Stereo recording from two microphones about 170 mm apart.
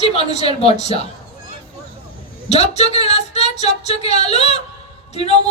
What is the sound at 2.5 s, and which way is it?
Speech, 40° left (ahead or behind).